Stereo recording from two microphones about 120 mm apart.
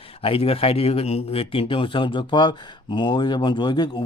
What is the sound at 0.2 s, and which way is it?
Speech, 55° left (ahead or behind).